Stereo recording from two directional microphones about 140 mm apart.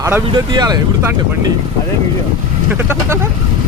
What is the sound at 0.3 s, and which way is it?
Speech, 30° right (ahead or behind).